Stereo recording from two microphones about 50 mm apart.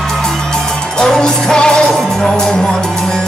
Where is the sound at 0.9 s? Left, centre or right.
Centre.